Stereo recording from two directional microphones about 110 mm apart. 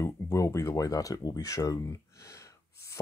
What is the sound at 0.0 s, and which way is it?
Speech, 25° left (ahead or behind).